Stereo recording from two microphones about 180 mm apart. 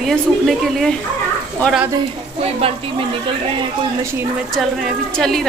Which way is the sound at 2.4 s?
35° right (ahead or behind).